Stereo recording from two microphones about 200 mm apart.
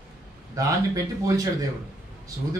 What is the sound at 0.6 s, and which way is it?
A man's voice, 15° right (ahead or behind).